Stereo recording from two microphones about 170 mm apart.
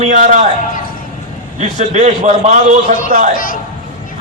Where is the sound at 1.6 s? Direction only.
45° right (ahead or behind).